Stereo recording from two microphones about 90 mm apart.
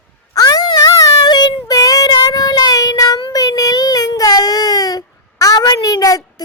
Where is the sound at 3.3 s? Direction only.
45° left (ahead or behind).